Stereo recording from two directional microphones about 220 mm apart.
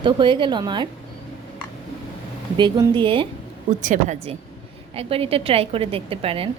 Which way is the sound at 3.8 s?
35° right (ahead or behind).